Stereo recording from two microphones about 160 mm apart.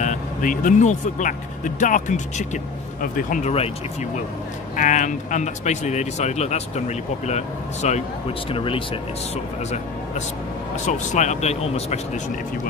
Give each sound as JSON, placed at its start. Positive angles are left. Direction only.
{"t": 0.0, "sound": "speech", "side_deg": 55}
{"t": 4.7, "sound": "speech", "side_deg": 50}
{"t": 8.5, "sound": "speech", "side_deg": 35}
{"t": 10.9, "sound": "speech", "side_deg": 50}